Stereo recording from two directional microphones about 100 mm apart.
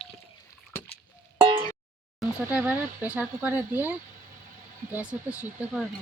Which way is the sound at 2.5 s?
15° right (ahead or behind).